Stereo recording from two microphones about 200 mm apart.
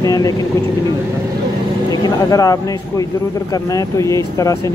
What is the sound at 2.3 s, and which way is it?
Speech, 15° left (ahead or behind).